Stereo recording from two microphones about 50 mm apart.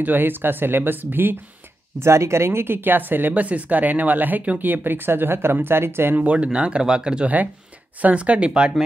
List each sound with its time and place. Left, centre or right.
0.0 s speech: right
2.0 s speech: right
6.1 s speech: right
8.0 s speech: right